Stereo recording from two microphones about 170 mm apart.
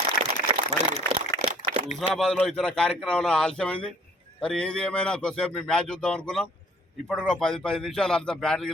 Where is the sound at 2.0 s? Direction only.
Centre (ahead or behind).